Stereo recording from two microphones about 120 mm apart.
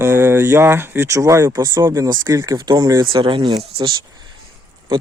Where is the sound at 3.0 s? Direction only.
45° right (ahead or behind).